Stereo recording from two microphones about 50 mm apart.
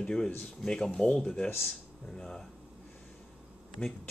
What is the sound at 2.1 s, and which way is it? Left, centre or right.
Chopping, centre.